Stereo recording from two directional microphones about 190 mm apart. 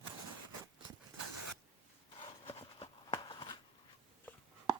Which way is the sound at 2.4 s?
30° left (ahead or behind).